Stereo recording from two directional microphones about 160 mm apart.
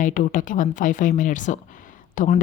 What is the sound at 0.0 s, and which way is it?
Speech, 55° left (ahead or behind).